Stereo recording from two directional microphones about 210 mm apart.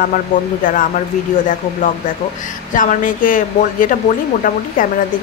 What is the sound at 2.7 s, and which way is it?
A woman's voice, 40° left (ahead or behind).